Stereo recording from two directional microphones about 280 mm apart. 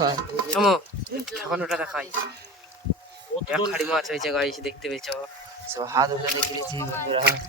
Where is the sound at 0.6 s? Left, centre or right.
Centre.